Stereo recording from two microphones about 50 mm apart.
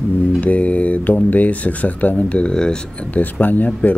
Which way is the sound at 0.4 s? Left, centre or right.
Left.